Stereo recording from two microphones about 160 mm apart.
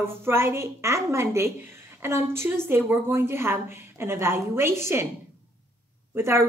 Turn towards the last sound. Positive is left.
turn(degrees=-15)  # may be behind; listen again after turning